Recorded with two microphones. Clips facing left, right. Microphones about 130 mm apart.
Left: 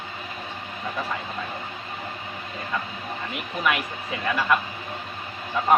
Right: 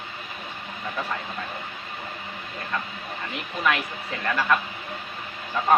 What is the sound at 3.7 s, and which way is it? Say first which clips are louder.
Speech: even; 5° left (ahead or behind).